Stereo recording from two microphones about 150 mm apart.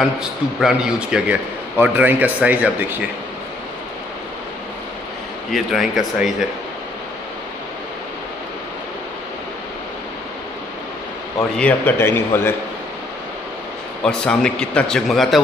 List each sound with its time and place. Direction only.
0.0 s a man's voice: centre (ahead or behind)
5.5 s a man's voice: centre (ahead or behind)
11.5 s a man's voice: 10° left (ahead or behind)
14.0 s a man's voice: 5° left (ahead or behind)